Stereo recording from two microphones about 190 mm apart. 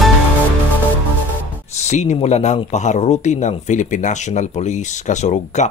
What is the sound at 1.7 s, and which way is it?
A man's voice, 35° left (ahead or behind).